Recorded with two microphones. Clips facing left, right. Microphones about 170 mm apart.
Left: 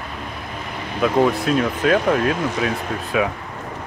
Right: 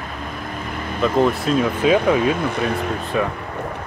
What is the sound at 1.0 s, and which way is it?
Speech, 5° left (ahead or behind).